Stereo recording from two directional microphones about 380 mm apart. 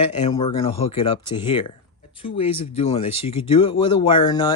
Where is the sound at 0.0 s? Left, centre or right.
Centre.